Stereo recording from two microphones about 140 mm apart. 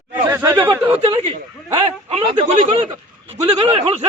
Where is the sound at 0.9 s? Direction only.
45° right (ahead or behind).